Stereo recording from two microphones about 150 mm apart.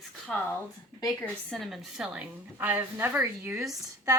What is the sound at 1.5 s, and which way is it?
A woman's voice, centre (ahead or behind).